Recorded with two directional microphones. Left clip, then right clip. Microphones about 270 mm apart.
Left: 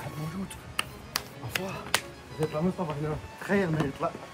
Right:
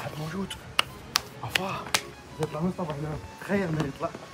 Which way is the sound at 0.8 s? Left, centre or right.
Centre.